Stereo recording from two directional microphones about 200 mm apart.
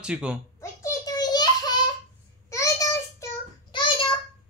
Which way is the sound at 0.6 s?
15° left (ahead or behind).